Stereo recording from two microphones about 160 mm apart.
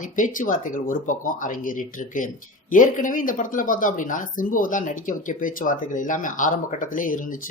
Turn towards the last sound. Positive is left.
turn(degrees=55)  # may be behind; listen again after turning